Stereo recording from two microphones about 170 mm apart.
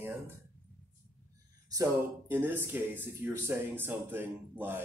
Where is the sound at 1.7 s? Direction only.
20° right (ahead or behind).